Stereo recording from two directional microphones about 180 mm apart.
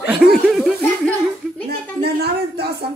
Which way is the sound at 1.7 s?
65° right (ahead or behind).